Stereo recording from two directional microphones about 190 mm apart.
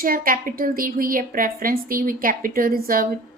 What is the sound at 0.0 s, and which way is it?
A woman's voice, 50° right (ahead or behind).